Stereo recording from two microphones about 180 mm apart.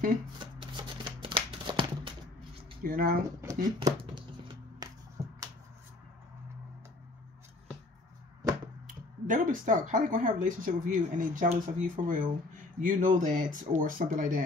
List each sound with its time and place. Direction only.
0.6 s shuffling cards: 25° right (ahead or behind)
2.8 s speech: 55° right (ahead or behind)
3.6 s speech: 25° right (ahead or behind)
4.8 s a sound: 20° right (ahead or behind)
8.8 s speech: 50° right (ahead or behind)